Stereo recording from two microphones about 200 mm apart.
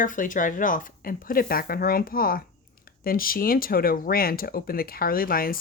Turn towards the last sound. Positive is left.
turn(degrees=45)  # may be behind; listen again after turning